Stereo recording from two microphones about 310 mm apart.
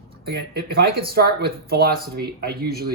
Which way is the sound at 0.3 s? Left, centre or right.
Right.